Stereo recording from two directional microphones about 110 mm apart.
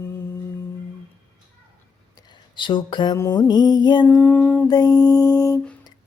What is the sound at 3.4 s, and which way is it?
Mantra, 40° left (ahead or behind).